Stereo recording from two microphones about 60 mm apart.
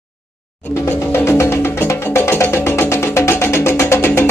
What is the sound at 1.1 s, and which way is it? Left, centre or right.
Music, left.